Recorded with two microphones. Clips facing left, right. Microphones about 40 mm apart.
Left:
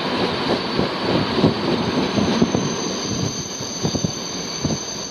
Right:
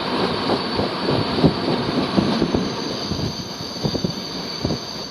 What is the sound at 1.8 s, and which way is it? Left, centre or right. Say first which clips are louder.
Train: even; centre.